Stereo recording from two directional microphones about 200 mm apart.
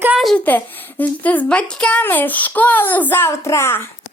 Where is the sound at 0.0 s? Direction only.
5° right (ahead or behind); by 3.8 s 10° left (ahead or behind).